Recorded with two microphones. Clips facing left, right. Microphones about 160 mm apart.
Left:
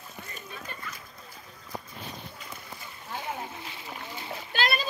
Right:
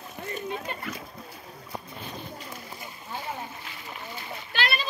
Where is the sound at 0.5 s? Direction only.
80° right.